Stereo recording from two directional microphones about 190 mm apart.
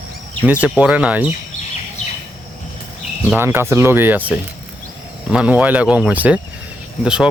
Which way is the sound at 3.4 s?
10° right (ahead or behind).